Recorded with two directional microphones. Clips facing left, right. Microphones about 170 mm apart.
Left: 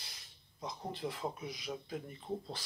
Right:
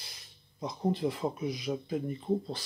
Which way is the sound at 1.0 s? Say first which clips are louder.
Right 8 dB; 15° right (ahead or behind).